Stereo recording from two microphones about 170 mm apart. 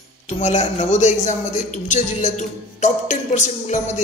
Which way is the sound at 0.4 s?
45° left (ahead or behind).